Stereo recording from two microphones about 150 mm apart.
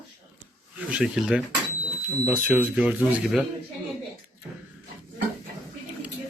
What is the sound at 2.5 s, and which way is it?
Speech, 10° right (ahead or behind).